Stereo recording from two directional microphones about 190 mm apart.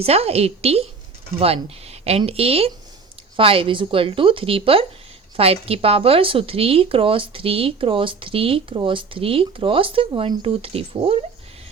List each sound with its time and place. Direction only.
0.0 s speech: 30° right (ahead or behind)